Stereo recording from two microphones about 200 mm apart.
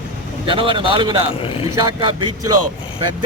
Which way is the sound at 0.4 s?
25° right (ahead or behind).